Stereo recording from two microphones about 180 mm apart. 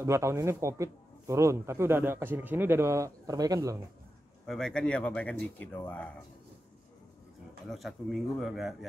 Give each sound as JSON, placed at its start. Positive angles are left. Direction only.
{"t": 0.0, "sound": "speech", "side_deg": -15}
{"t": 4.5, "sound": "speech", "side_deg": 5}
{"t": 7.6, "sound": "speech", "side_deg": 0}